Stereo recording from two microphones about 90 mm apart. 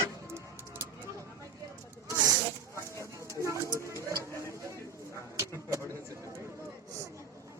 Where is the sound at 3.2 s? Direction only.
35° right (ahead or behind).